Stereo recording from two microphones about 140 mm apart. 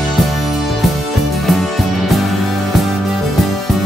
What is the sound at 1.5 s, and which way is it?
Music, centre (ahead or behind).